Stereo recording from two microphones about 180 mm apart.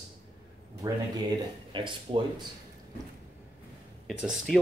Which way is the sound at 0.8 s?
25° right (ahead or behind).